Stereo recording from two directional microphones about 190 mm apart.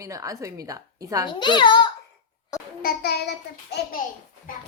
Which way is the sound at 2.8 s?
55° left (ahead or behind).